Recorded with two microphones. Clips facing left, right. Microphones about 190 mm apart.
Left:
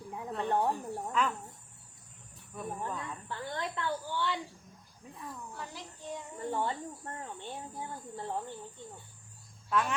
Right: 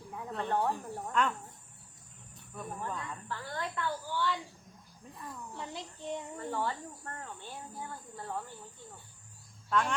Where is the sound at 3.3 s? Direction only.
25° left (ahead or behind).